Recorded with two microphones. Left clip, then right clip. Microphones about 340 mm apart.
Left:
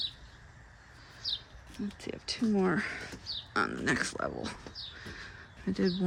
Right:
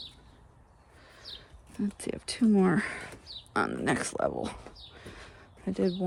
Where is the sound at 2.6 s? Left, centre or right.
Centre.